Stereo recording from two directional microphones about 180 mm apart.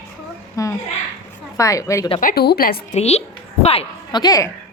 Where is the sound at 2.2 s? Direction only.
60° left (ahead or behind).